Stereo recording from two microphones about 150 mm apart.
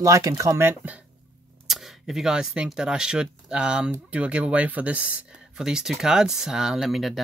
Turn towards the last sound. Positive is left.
turn(degrees=0)  # may be behind; listen again after turning